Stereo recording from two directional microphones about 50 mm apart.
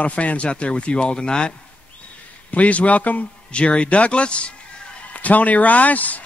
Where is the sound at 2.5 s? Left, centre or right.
Left.